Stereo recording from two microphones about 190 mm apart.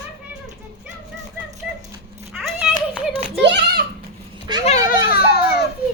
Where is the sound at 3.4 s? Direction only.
65° right (ahead or behind).